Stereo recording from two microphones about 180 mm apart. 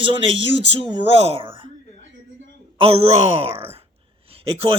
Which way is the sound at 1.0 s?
30° right (ahead or behind).